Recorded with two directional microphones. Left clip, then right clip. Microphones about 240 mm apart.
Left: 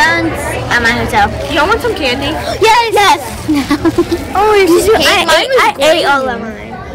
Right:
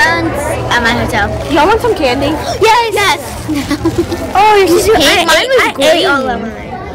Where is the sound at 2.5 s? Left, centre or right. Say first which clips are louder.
Even; centre.